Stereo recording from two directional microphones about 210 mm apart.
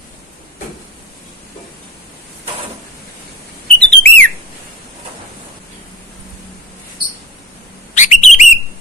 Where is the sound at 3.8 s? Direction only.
5° left (ahead or behind).